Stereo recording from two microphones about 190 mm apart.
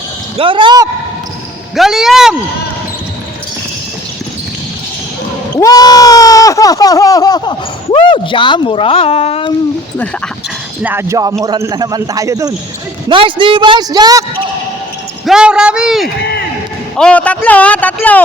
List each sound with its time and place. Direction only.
0.3 s a man's voice: 25° right (ahead or behind)
1.7 s speech: centre (ahead or behind)
5.5 s speech: 20° left (ahead or behind)
10.8 s a man's voice: 15° right (ahead or behind)
15.3 s a man's voice: 5° right (ahead or behind)